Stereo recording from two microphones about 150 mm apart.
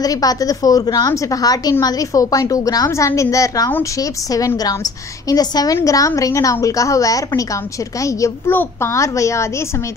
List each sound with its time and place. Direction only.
0.0 s a woman's voice: 25° left (ahead or behind)